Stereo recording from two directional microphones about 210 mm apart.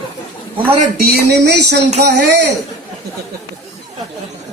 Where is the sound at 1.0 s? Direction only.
50° right (ahead or behind).